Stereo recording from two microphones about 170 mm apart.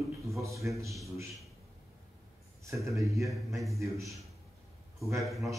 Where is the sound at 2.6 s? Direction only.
20° right (ahead or behind).